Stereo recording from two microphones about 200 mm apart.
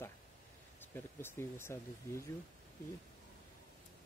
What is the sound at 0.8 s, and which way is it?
Speech, 10° left (ahead or behind).